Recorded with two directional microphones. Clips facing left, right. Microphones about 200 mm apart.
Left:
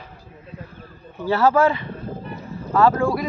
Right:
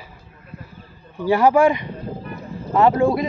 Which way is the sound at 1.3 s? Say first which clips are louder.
Right 2 dB; 15° right (ahead or behind).